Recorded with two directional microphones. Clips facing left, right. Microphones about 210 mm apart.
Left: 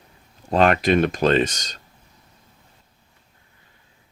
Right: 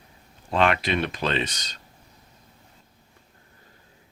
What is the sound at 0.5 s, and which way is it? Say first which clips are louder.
Speech: left 6 dB; 45° left (ahead or behind).